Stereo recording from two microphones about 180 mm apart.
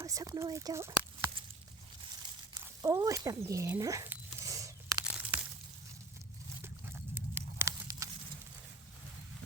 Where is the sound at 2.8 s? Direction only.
20° right (ahead or behind).